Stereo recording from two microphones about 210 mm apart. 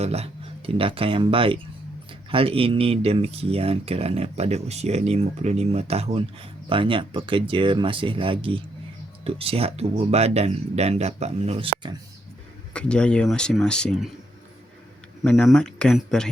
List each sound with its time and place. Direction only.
0.0 s speech: 30° right (ahead or behind)
12.7 s speech: 5° left (ahead or behind)
15.2 s speech: 5° left (ahead or behind)